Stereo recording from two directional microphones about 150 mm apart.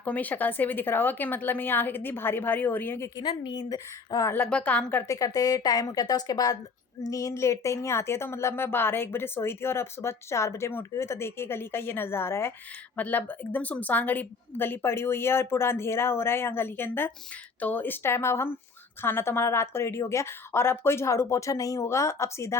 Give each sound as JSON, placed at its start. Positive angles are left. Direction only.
{"t": 0.0, "sound": "a woman's voice", "side_deg": 10}
{"t": 3.2, "sound": "a woman's voice", "side_deg": 30}
{"t": 4.4, "sound": "a woman's voice", "side_deg": 10}